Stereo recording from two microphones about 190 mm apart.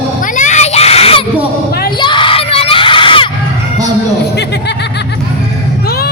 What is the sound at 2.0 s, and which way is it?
Crowd, 25° left (ahead or behind).